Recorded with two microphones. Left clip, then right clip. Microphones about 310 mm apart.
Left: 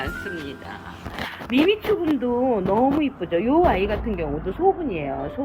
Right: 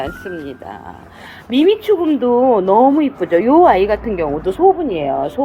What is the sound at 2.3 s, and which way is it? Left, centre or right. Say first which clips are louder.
Speech: right 11 dB; right.